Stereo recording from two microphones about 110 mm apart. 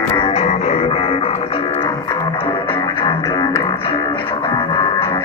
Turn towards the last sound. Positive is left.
turn(degrees=50)  # may be behind; listen again after turning